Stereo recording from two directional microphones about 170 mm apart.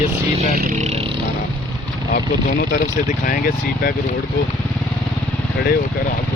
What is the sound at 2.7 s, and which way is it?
Speech, 50° left (ahead or behind).